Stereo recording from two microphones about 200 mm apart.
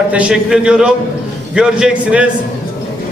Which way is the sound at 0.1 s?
5° right (ahead or behind).